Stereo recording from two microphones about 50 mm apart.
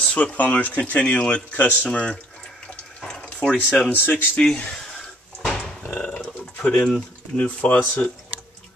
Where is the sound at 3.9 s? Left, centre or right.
Left.